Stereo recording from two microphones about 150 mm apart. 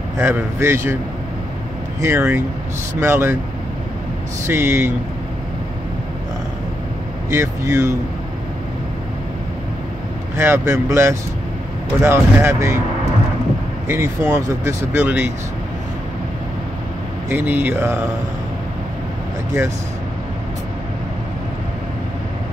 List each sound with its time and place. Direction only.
0.2 s speech: 15° right (ahead or behind)
2.0 s speech: 15° right (ahead or behind)
4.5 s speech: 15° right (ahead or behind)
7.2 s speech: 15° right (ahead or behind)
10.3 s speech: 15° right (ahead or behind)
13.8 s speech: 20° right (ahead or behind)
17.3 s speech: 15° right (ahead or behind)